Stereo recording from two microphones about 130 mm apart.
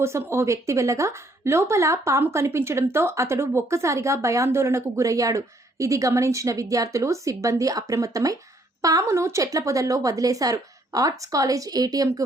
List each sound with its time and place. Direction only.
0.0 s a woman's voice: 20° right (ahead or behind)